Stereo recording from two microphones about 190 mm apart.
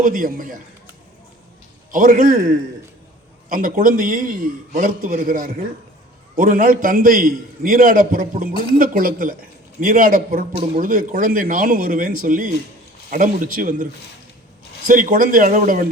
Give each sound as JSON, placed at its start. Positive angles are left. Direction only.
{"t": 0.0, "sound": "a man's voice", "side_deg": -45}
{"t": 1.9, "sound": "a man's voice", "side_deg": -45}
{"t": 8.5, "sound": "speech", "side_deg": 25}
{"t": 8.8, "sound": "a man's voice", "side_deg": -45}
{"t": 14.8, "sound": "a man's voice", "side_deg": -45}